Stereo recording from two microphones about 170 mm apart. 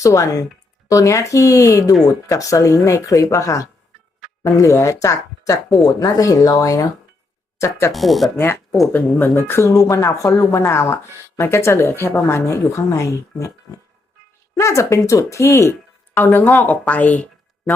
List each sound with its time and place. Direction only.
0.0 s speech: 20° left (ahead or behind)
4.2 s music: centre (ahead or behind)
4.5 s a woman's voice: 15° left (ahead or behind)
7.9 s a woman's voice: centre (ahead or behind)